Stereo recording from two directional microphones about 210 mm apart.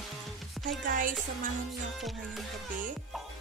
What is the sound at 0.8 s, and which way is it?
Music, 40° right (ahead or behind).